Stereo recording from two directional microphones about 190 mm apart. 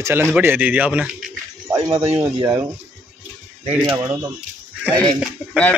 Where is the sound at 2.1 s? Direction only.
20° right (ahead or behind).